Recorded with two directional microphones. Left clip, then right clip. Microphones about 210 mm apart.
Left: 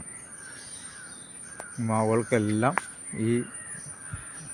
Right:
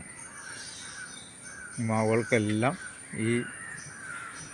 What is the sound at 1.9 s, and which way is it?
Speech, 10° left (ahead or behind).